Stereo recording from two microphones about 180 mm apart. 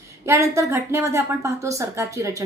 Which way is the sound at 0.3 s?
15° right (ahead or behind).